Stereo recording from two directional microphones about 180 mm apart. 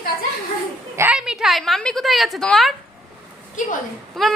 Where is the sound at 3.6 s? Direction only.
45° left (ahead or behind).